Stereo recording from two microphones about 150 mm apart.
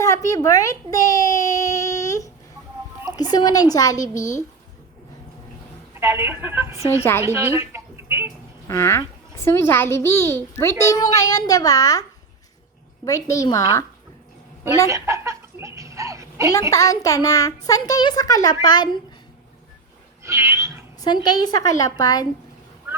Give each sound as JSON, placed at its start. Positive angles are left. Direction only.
{"t": 0.0, "sound": "a sound", "side_deg": 20}
{"t": 3.3, "sound": "a child's voice", "side_deg": 25}
{"t": 6.0, "sound": "a woman's voice", "side_deg": -15}
{"t": 7.0, "sound": "a woman's voice", "side_deg": 15}
{"t": 7.3, "sound": "a sound", "side_deg": -15}
{"t": 8.6, "sound": "a child's voice", "side_deg": 20}
{"t": 13.1, "sound": "a child's voice", "side_deg": 20}
{"t": 14.8, "sound": "a sound", "side_deg": -20}
{"t": 16.5, "sound": "a child's voice", "side_deg": 25}
{"t": 20.2, "sound": "cat", "side_deg": -20}
{"t": 21.0, "sound": "a child's voice", "side_deg": 30}